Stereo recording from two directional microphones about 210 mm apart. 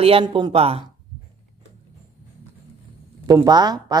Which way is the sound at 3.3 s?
20° right (ahead or behind).